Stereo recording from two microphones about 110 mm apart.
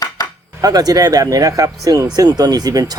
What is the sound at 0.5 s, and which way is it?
Speech, 35° right (ahead or behind).